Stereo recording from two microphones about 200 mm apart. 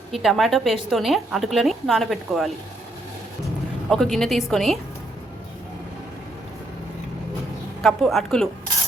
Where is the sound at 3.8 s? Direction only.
Centre (ahead or behind).